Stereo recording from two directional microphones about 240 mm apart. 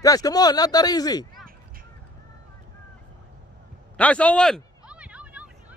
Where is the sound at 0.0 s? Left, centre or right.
Centre.